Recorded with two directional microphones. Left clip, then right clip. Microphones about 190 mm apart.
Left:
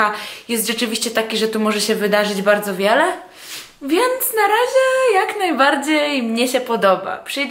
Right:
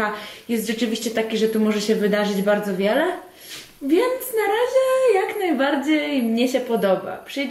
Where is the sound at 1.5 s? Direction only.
25° left (ahead or behind).